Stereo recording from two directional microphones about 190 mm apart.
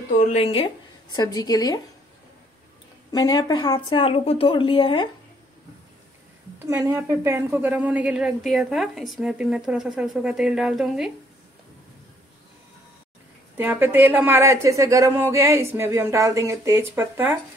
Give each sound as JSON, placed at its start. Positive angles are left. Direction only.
{"t": 0.3, "sound": "a woman's voice", "side_deg": 30}
{"t": 3.1, "sound": "a woman's voice", "side_deg": 20}
{"t": 6.6, "sound": "a woman's voice", "side_deg": -10}
{"t": 13.6, "sound": "a woman's voice", "side_deg": -10}